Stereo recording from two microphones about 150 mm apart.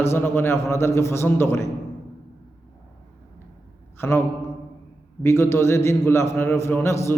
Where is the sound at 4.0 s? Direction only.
15° left (ahead or behind).